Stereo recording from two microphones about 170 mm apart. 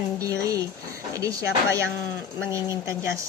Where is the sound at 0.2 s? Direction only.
20° right (ahead or behind).